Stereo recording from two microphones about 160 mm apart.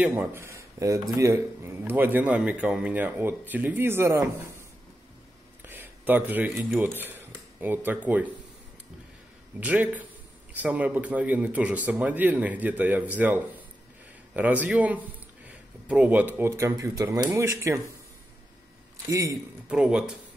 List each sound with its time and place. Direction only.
0.0 s a man's voice: 15° right (ahead or behind)
5.7 s a sound: 10° right (ahead or behind)
6.5 s a man's voice: centre (ahead or behind)
6.8 s speech: 10° right (ahead or behind)
9.6 s a man's voice: 10° right (ahead or behind)
19.3 s a man's voice: 5° right (ahead or behind)